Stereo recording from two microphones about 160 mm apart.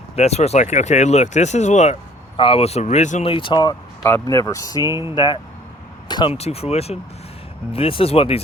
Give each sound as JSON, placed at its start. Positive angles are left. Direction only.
{"t": 0.2, "sound": "speech", "side_deg": 40}
{"t": 4.8, "sound": "speech", "side_deg": -20}
{"t": 5.1, "sound": "speech", "side_deg": 30}
{"t": 6.3, "sound": "speech", "side_deg": 40}